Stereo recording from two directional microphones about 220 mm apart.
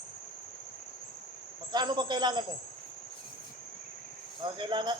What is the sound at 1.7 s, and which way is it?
Speech, 20° right (ahead or behind).